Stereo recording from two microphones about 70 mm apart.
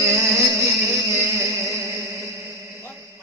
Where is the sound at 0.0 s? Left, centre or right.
Right.